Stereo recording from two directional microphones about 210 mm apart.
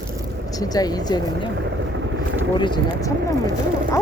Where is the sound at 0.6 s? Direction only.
20° left (ahead or behind).